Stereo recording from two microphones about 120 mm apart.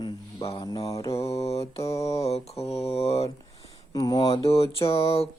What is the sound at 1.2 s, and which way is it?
Mantra, 60° left (ahead or behind).